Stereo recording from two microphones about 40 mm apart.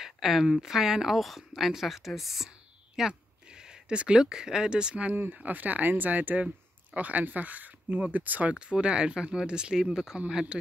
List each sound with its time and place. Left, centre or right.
0.0 s a woman's voice: centre
3.1 s a sound: centre
4.0 s speech: centre
5.3 s speech: right
8.5 s a woman's voice: right